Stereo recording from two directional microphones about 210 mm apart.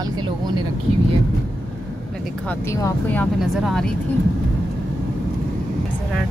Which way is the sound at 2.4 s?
15° left (ahead or behind).